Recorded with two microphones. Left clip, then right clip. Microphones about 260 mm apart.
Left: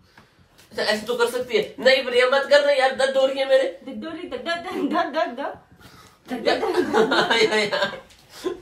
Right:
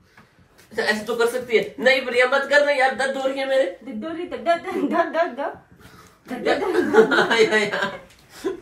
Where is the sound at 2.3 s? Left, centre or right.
Left.